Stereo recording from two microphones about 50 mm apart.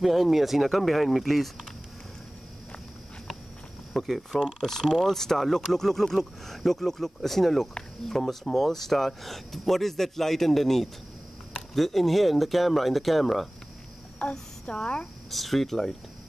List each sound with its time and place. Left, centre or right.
0.0 s speech: centre
3.9 s speech: centre
14.2 s speech: centre
15.3 s speech: centre